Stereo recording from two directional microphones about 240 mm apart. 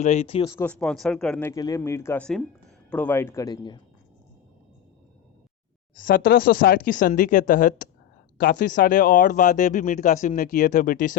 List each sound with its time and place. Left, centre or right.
0.0 s speech: left
0.5 s speech: centre
6.0 s speech: left